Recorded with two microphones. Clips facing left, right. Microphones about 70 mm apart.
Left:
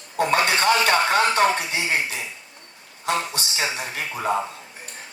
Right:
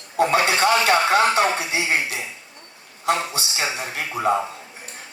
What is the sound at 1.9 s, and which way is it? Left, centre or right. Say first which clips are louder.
Speech: right 2 dB; right.